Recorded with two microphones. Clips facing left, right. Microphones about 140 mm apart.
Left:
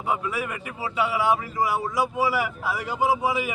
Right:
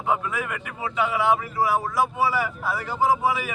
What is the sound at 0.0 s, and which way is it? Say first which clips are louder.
Speech: right 1 dB; 10° left (ahead or behind).